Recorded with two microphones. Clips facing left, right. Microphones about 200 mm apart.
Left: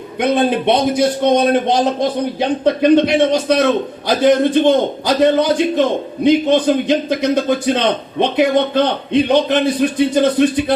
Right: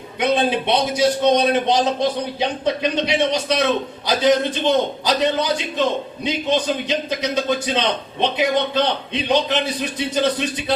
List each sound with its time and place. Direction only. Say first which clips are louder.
0.2 s a man's voice: left 4 dB; 50° left (ahead or behind)